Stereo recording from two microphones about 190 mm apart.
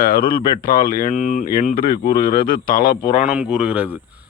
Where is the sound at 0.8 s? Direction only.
45° left (ahead or behind).